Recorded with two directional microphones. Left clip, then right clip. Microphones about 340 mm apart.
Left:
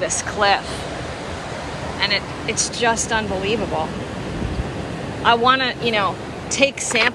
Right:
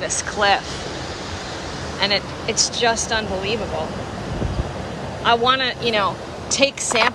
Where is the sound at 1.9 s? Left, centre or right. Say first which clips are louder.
Right 1 dB; centre.